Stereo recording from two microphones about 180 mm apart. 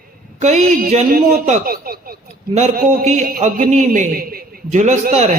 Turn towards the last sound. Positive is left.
turn(degrees=-40)  # may be behind; listen again after turning